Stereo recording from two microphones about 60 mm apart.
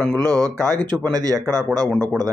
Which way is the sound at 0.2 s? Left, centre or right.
Right.